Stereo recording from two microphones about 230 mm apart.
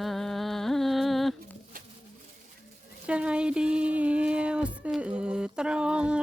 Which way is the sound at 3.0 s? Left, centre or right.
Centre.